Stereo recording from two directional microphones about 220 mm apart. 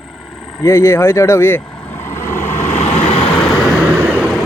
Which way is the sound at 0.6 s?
10° left (ahead or behind).